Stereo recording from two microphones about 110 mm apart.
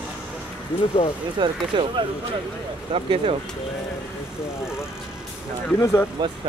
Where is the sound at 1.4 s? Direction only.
50° right (ahead or behind).